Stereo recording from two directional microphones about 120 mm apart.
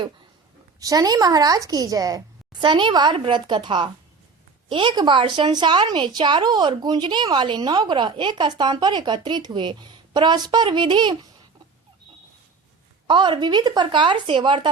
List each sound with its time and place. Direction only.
0.8 s speech: 30° right (ahead or behind)
13.1 s speech: 40° right (ahead or behind)